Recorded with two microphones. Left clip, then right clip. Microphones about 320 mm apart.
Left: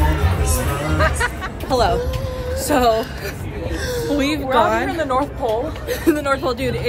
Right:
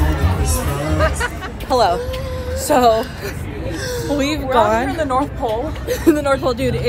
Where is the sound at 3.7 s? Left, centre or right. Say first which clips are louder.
Left 1 dB; centre.